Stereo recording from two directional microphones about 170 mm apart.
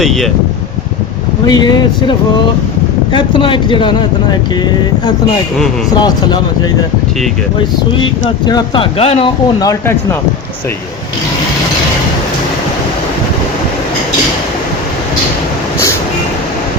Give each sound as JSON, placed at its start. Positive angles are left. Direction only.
{"t": 1.5, "sound": "speech", "side_deg": 25}
{"t": 8.4, "sound": "speech", "side_deg": 25}
{"t": 9.6, "sound": "speech", "side_deg": 20}